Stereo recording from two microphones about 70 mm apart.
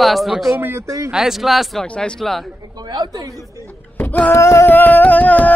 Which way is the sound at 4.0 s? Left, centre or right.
Left.